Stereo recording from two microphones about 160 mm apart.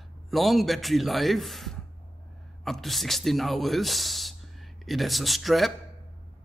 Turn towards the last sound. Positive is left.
turn(degrees=0)  # may be behind; listen again after turning